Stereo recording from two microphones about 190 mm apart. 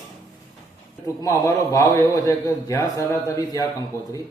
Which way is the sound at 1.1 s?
15° left (ahead or behind).